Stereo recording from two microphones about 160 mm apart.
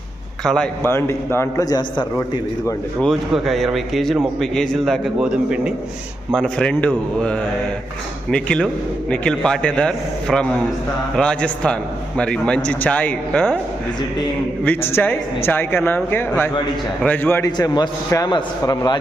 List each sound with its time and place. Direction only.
0.4 s a man's voice: 5° left (ahead or behind)
0.9 s a man's voice: 15° left (ahead or behind)
3.0 s a man's voice: centre (ahead or behind)
6.3 s a man's voice: 5° left (ahead or behind)
14.6 s a man's voice: 10° left (ahead or behind)